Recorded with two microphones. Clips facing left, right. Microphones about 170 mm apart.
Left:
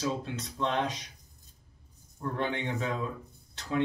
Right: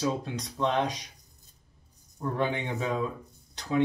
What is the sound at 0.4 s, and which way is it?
Speech, 15° right (ahead or behind).